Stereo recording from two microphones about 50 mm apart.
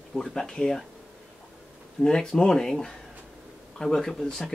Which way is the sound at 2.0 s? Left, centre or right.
Centre.